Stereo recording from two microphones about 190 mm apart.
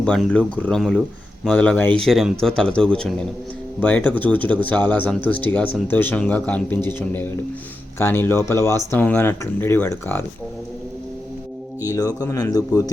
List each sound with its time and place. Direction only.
0.0 s a man's voice: 5° left (ahead or behind)
11.9 s speech: 20° left (ahead or behind)